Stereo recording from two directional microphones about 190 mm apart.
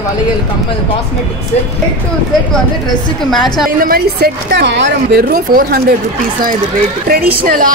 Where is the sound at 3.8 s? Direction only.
50° right (ahead or behind); by 5.2 s 65° right (ahead or behind).